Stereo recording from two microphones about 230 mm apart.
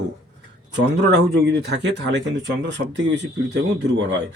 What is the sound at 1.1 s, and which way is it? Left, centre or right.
Speech, right.